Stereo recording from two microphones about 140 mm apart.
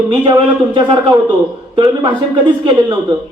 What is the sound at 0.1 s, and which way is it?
Speech, 35° right (ahead or behind).